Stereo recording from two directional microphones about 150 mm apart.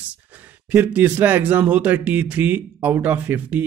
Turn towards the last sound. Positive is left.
turn(degrees=-10)  # may be behind; listen again after turning